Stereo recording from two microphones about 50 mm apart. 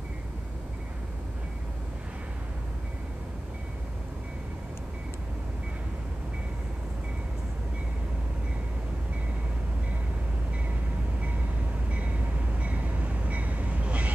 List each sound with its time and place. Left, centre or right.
12.5 s train: right